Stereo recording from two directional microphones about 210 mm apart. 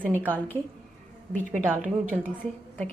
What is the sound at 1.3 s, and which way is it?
Speech, 35° right (ahead or behind).